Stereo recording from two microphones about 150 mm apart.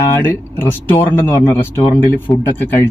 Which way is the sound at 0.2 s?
15° left (ahead or behind).